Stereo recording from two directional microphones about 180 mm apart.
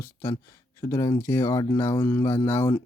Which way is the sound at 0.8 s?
15° left (ahead or behind).